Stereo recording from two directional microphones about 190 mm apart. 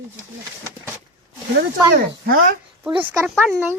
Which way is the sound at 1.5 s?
50° right (ahead or behind).